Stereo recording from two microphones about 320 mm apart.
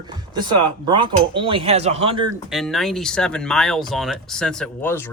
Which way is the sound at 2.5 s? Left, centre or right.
Centre.